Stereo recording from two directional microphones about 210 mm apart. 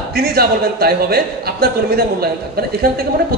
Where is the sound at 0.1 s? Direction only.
50° right (ahead or behind).